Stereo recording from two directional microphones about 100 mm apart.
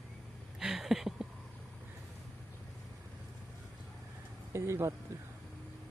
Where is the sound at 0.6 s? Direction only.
5° right (ahead or behind).